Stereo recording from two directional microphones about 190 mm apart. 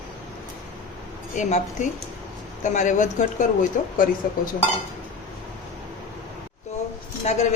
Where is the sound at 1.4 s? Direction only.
40° left (ahead or behind).